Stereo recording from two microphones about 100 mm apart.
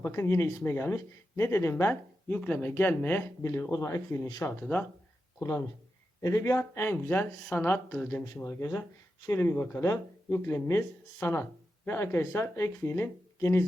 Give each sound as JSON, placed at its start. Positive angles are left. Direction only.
{"t": 0.0, "sound": "speech", "side_deg": 25}
{"t": 5.4, "sound": "speech", "side_deg": 35}
{"t": 9.8, "sound": "speech", "side_deg": 35}